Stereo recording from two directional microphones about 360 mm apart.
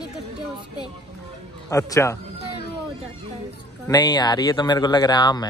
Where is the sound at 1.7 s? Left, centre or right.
Centre.